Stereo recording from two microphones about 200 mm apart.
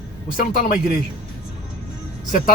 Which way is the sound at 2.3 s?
45° left (ahead or behind).